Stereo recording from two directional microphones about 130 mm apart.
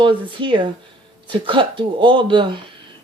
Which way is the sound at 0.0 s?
40° right (ahead or behind).